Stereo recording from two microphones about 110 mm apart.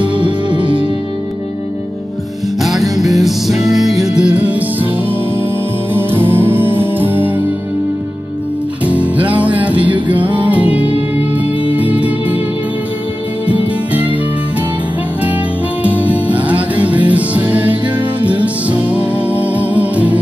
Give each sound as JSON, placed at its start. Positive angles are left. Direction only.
{"t": 0.2, "sound": "music", "side_deg": -45}
{"t": 2.6, "sound": "music", "side_deg": 0}
{"t": 5.9, "sound": "music", "side_deg": -20}
{"t": 8.8, "sound": "music", "side_deg": -15}
{"t": 13.5, "sound": "music", "side_deg": -15}
{"t": 15.8, "sound": "music", "side_deg": -15}